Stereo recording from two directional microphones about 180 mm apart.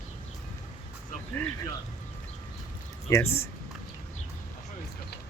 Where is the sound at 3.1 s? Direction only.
15° left (ahead or behind).